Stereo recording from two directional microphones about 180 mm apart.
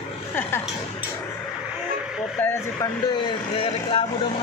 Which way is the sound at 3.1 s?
30° left (ahead or behind).